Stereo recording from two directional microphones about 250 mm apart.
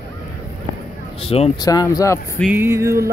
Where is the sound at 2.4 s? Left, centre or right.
Centre.